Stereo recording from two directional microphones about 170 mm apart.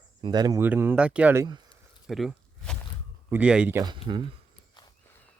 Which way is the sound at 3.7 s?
25° right (ahead or behind).